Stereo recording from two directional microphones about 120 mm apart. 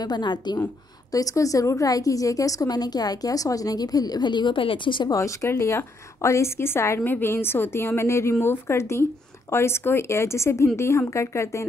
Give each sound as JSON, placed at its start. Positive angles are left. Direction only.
{"t": 0.0, "sound": "speech", "side_deg": 35}
{"t": 5.1, "sound": "speech", "side_deg": 25}